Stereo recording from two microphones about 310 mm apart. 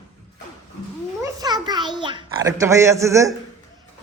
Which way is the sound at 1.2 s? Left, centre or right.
Centre.